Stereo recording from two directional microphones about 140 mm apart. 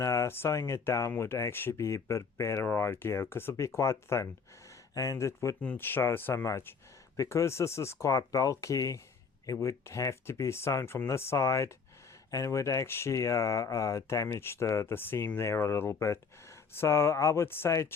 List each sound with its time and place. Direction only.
0.0 s speech: 20° left (ahead or behind)